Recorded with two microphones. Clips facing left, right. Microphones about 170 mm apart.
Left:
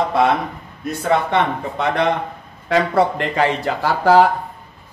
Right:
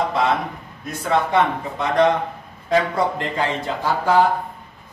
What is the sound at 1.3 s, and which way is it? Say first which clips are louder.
Speech: even; 65° left (ahead or behind).